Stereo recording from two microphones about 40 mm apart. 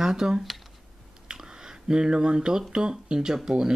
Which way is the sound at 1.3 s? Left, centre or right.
Centre.